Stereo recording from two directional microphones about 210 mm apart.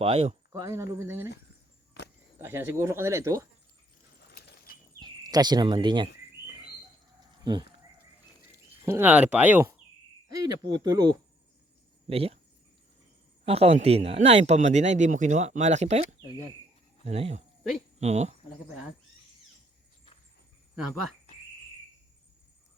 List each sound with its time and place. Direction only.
0.0 s speech: 25° right (ahead or behind)
0.6 s speech: 15° right (ahead or behind)
2.4 s speech: 10° right (ahead or behind)
4.3 s a sound: 50° left (ahead or behind)
4.9 s speech: 20° right (ahead or behind)
7.4 s speech: 20° right (ahead or behind)
8.9 s speech: 10° right (ahead or behind)
10.7 s speech: 20° right (ahead or behind)
13.4 s speech: 30° right (ahead or behind)
20.7 s speech: centre (ahead or behind)